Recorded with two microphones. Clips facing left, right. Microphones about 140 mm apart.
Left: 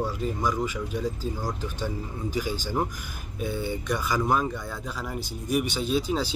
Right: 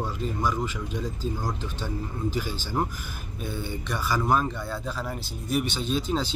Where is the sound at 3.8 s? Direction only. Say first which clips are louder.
Right 1 dB; 15° left (ahead or behind).